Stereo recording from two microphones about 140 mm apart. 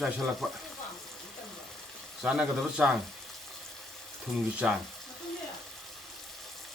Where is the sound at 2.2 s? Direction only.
5° right (ahead or behind).